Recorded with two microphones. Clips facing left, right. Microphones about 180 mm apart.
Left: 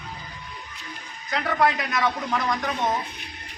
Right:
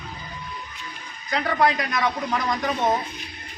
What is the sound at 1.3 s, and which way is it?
Speech, centre (ahead or behind).